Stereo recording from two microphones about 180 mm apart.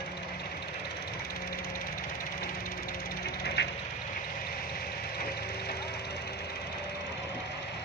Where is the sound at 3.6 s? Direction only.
70° left (ahead or behind).